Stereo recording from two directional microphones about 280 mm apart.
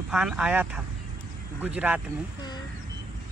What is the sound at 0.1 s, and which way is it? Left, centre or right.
Speech, centre.